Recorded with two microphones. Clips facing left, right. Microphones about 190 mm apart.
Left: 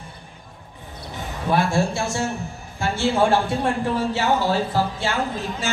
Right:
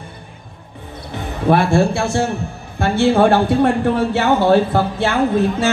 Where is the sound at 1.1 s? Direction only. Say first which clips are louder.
Right 6 dB; 60° right (ahead or behind).